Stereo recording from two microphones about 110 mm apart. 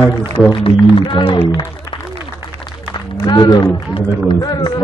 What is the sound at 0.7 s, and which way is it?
Speech, 50° left (ahead or behind).